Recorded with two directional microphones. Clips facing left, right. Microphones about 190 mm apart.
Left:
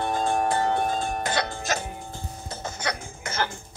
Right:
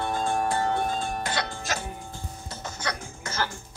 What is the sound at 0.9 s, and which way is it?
Music, 45° left (ahead or behind).